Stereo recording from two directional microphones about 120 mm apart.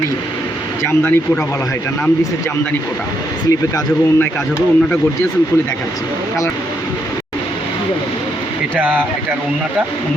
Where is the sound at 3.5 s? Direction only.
25° left (ahead or behind).